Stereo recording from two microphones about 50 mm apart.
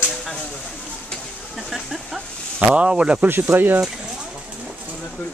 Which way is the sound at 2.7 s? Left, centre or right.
Right.